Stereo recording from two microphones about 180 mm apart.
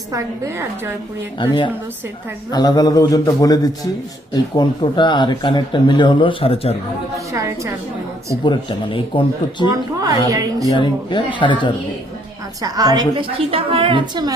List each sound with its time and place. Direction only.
0.1 s a woman's voice: 15° right (ahead or behind)
1.4 s speech: 25° left (ahead or behind)
7.3 s a woman's voice: 15° right (ahead or behind)
8.4 s speech: 25° left (ahead or behind)
10.0 s a woman's voice: 20° right (ahead or behind)
10.7 s speech: 25° left (ahead or behind)
12.6 s a woman's voice: 20° right (ahead or behind)